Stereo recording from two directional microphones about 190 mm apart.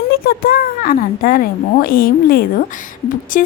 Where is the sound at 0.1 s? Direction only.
50° left (ahead or behind).